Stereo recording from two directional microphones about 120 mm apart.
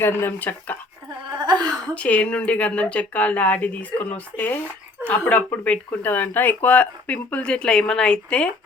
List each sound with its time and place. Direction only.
0.0 s speech: 20° left (ahead or behind)
1.4 s a sound: 35° right (ahead or behind)
2.0 s speech: 10° left (ahead or behind)